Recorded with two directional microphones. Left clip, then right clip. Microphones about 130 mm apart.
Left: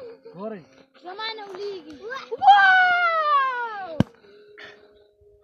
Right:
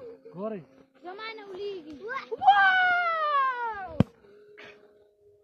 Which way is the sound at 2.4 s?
30° left (ahead or behind).